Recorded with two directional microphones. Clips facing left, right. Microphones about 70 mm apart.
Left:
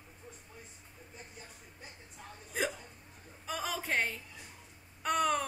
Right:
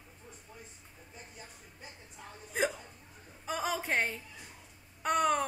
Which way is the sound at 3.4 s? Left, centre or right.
Centre.